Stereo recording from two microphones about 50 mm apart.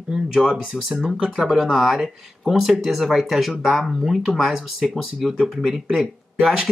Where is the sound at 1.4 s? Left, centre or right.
Centre.